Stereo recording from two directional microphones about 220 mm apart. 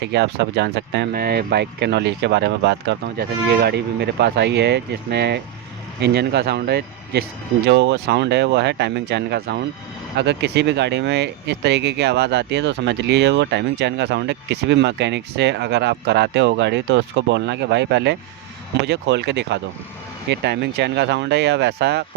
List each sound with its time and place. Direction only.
0.0 s speech: 50° right (ahead or behind)